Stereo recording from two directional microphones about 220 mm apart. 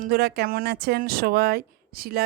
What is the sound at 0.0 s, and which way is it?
Speech, 45° right (ahead or behind).